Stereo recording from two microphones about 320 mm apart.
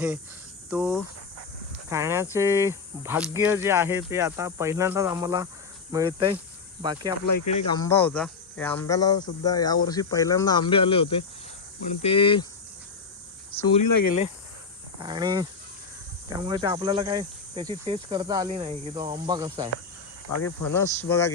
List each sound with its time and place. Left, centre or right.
0.7 s speech: centre
1.9 s cricket: centre
7.7 s speech: centre
13.5 s speech: centre
13.8 s speech: left
15.0 s cricket: centre
20.4 s speech: left
20.7 s speech: centre